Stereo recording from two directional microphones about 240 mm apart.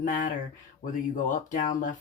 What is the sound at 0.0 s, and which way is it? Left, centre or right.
Speech, left.